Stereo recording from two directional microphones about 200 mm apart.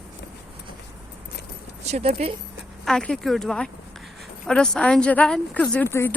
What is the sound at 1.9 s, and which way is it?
Speech, 35° right (ahead or behind).